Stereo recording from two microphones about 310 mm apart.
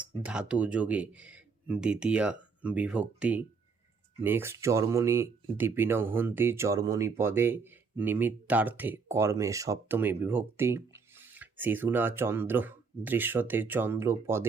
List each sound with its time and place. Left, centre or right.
0.2 s speech: centre